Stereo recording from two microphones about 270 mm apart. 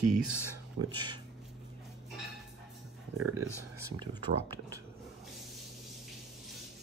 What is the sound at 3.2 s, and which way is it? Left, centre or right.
Speech, right.